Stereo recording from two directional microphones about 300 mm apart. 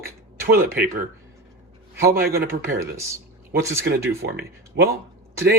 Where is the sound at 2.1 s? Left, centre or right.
Right.